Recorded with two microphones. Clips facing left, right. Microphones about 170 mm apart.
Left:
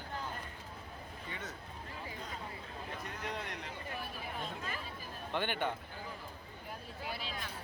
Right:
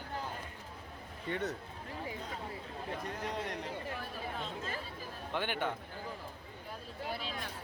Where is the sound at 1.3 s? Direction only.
65° right (ahead or behind).